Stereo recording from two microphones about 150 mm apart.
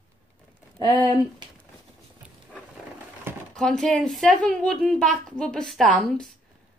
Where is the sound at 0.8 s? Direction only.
30° right (ahead or behind).